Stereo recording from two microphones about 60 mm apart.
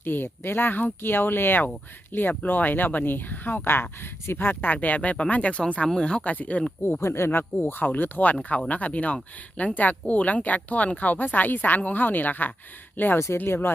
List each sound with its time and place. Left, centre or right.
0.0 s speech: left; by 6.3 s centre
6.3 s speech: left
7.0 s speech: left
13.1 s speech: left
13.4 s speech: left